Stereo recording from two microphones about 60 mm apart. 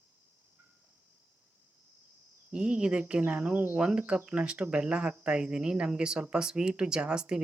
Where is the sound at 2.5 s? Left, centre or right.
Centre.